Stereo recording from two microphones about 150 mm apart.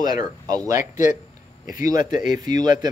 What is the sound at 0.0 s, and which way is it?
Speech, 25° right (ahead or behind).